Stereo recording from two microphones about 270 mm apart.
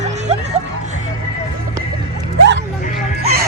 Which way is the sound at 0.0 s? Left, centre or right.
Right.